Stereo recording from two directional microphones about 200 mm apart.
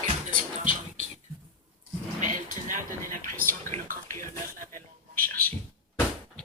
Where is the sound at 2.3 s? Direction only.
40° right (ahead or behind).